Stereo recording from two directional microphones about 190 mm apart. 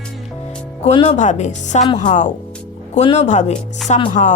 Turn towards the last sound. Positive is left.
turn(degrees=35)  # may be behind; listen again after turning